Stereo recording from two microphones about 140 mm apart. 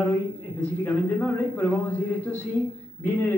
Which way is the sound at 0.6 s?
10° left (ahead or behind).